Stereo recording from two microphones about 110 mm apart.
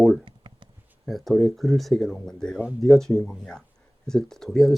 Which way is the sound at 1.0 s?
Centre (ahead or behind).